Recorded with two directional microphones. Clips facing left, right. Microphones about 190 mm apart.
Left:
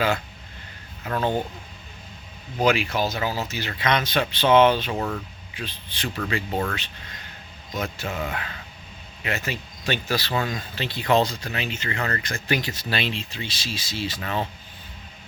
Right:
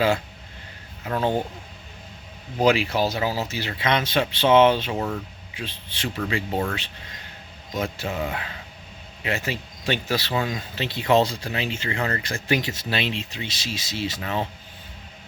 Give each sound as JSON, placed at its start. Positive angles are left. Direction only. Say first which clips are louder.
{"t": 1.1, "sound": "speech", "louder": "right 1 dB", "side_deg": -5}
{"t": 2.6, "sound": "speech", "louder": "right 2 dB", "side_deg": -35}
{"t": 4.9, "sound": "speech", "louder": "right 1 dB", "side_deg": -10}
{"t": 5.5, "sound": "speech", "louder": "even", "side_deg": -25}
{"t": 6.5, "sound": "speech", "louder": "right 1 dB", "side_deg": -15}
{"t": 7.7, "sound": "speech", "louder": "right 2 dB", "side_deg": -30}
{"t": 8.0, "sound": "speech", "louder": "right 2 dB", "side_deg": -15}
{"t": 9.2, "sound": "speech", "louder": "right 2 dB", "side_deg": -30}
{"t": 10.3, "sound": "speech", "louder": "right 1 dB", "side_deg": -10}
{"t": 10.8, "sound": "speech", "louder": "right 1 dB", "side_deg": -25}